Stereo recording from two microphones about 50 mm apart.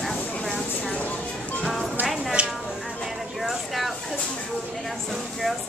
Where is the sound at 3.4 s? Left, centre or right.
Centre.